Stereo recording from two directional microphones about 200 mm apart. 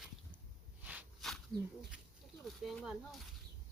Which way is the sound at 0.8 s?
5° right (ahead or behind).